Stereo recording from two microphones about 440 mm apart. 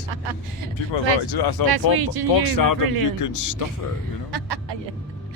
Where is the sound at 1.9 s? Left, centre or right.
Right.